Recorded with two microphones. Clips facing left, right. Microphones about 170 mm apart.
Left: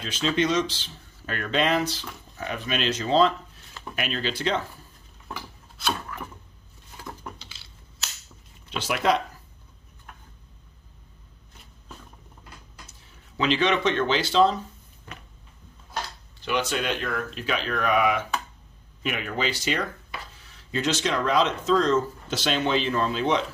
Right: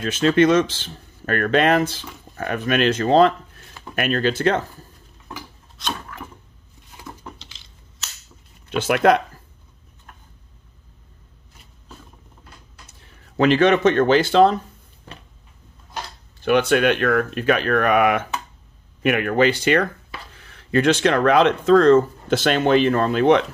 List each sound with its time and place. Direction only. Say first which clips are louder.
0.0 s speech: right 9 dB; 55° right (ahead or behind)
5.8 s a sound: even; 5° left (ahead or behind)
7.0 s dishes: right 1 dB; 15° right (ahead or behind)
7.3 s crushing: right 1 dB; 5° left (ahead or behind)
8.6 s speech: right 8 dB; 55° right (ahead or behind)
13.4 s speech: right 8 dB; 50° right (ahead or behind)
16.3 s speech: right 10 dB; 55° right (ahead or behind)